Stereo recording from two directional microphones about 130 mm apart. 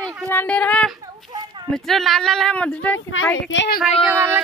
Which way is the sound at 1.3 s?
30° right (ahead or behind).